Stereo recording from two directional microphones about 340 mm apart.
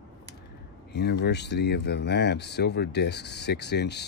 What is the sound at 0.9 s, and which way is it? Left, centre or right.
Speech, left.